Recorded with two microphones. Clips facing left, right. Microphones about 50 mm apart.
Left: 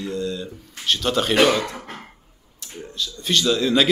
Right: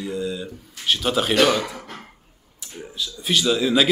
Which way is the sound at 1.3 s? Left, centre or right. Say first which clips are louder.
Left 1 dB; centre.